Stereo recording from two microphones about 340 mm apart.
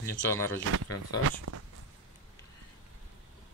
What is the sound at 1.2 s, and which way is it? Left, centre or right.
Speech, right.